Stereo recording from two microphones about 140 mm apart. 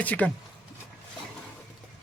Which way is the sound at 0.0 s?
10° left (ahead or behind).